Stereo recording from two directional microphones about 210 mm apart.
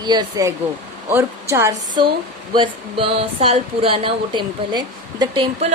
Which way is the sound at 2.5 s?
25° right (ahead or behind).